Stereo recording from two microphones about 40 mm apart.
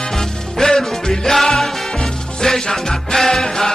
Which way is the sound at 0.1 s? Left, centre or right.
Centre.